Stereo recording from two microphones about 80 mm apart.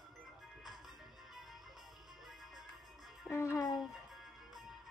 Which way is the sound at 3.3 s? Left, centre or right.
Left.